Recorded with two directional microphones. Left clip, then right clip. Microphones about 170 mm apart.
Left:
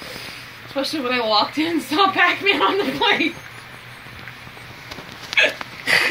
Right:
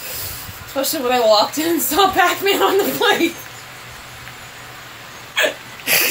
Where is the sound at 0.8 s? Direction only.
30° right (ahead or behind).